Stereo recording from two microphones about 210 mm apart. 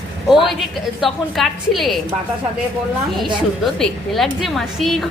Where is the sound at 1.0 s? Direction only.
Centre (ahead or behind).